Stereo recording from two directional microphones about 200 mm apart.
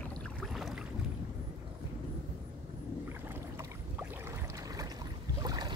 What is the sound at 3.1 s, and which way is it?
Boat, 10° right (ahead or behind).